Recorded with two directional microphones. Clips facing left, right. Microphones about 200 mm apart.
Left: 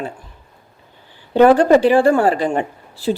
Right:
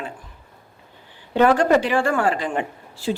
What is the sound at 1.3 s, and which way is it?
Speech, 35° left (ahead or behind).